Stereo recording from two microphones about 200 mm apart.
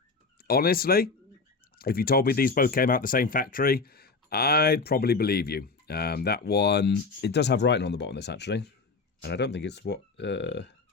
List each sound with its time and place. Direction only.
0.3 s speech: 50° left (ahead or behind)